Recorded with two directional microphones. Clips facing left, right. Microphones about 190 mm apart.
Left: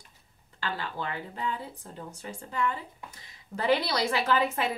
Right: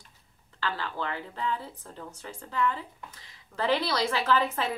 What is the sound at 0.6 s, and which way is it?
A woman's voice, 15° left (ahead or behind).